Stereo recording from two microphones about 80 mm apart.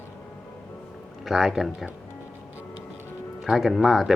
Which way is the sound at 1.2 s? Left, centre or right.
Centre.